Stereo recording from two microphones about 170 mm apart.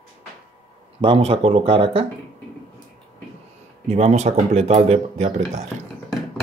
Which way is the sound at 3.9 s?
40° right (ahead or behind).